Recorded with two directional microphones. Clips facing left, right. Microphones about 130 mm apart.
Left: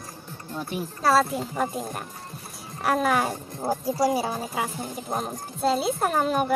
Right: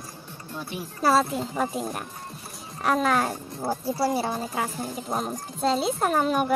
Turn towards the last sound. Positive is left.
turn(degrees=0)  # may be behind; listen again after turning